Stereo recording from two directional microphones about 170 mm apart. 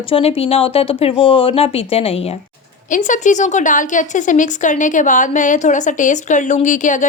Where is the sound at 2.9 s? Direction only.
45° left (ahead or behind).